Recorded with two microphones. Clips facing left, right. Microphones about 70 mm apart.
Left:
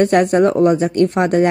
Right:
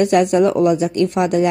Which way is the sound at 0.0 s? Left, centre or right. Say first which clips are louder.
Left 1 dB; left.